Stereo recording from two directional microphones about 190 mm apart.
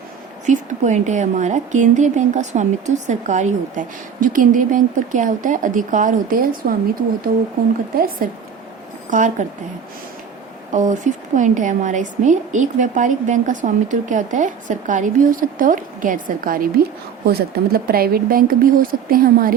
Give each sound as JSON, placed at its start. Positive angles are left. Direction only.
{"t": 0.4, "sound": "a woman's voice", "side_deg": -40}
{"t": 7.9, "sound": "speech", "side_deg": -50}
{"t": 10.7, "sound": "a woman's voice", "side_deg": -40}